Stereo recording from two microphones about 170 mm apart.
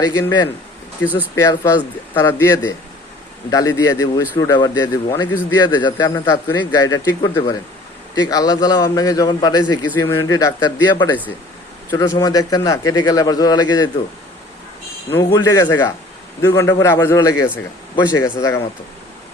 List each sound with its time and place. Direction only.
0.0 s a man's voice: 20° left (ahead or behind)
15.1 s a man's voice: 20° left (ahead or behind)